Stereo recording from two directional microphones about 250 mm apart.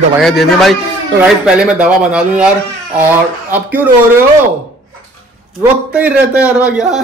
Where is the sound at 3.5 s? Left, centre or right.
Centre.